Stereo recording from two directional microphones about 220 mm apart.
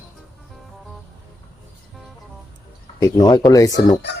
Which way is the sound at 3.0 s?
15° left (ahead or behind).